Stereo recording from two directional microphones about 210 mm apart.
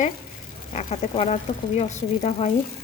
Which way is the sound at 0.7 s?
30° left (ahead or behind).